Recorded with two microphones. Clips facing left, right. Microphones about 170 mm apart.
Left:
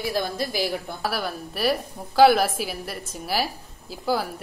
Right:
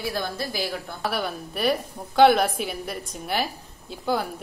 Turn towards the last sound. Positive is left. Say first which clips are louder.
# left 1 dB
turn(degrees=5)  # may be behind; listen again after turning